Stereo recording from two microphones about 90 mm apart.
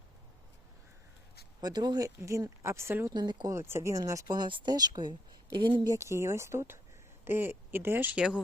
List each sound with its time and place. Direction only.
1.6 s speech: 50° right (ahead or behind)
2.0 s speech: 35° right (ahead or behind)
3.1 s speech: 55° right (ahead or behind)
3.5 s speech: 30° right (ahead or behind)
3.9 s speech: 40° right (ahead or behind)
4.4 s speech: 60° right (ahead or behind)
5.8 s speech: 35° right (ahead or behind)
8.1 s speech: 10° right (ahead or behind)